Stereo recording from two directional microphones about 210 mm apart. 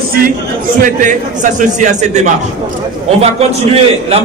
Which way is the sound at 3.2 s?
30° right (ahead or behind).